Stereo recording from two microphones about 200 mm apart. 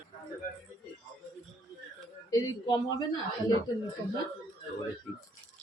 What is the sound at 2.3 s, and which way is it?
Speech, 20° left (ahead or behind).